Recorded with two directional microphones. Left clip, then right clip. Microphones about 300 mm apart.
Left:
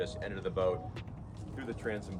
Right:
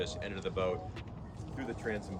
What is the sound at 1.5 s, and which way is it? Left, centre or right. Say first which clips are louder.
Speech: even; left.